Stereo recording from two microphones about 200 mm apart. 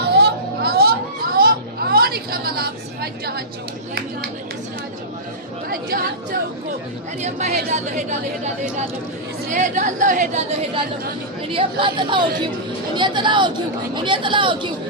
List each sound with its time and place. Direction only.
0.0 s a sound: 50° right (ahead or behind)
5.6 s chatter: 45° right (ahead or behind)
7.2 s a woman's voice: 35° right (ahead or behind)
9.5 s a woman's voice: 40° right (ahead or behind)
11.4 s speech: 25° right (ahead or behind)